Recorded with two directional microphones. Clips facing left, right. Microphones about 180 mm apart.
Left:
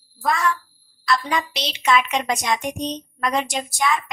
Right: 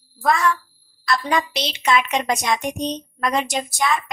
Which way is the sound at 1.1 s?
40° right (ahead or behind).